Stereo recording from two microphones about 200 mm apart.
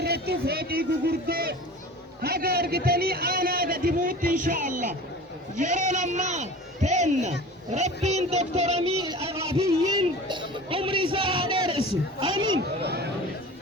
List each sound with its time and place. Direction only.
0.0 s a man's voice: 55° right (ahead or behind); by 11.8 s 25° right (ahead or behind)
12.4 s speech: 90° right
12.8 s speech: 55° right (ahead or behind)